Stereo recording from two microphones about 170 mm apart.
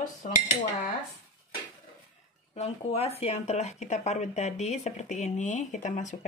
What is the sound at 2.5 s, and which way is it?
Speech, 40° left (ahead or behind).